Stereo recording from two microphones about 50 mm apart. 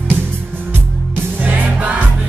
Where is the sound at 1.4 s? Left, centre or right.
Right.